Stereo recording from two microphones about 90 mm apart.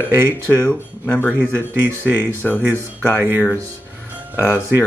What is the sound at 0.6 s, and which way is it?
Speech, 20° left (ahead or behind).